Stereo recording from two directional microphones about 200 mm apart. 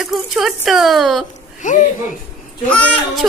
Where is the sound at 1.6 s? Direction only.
40° left (ahead or behind).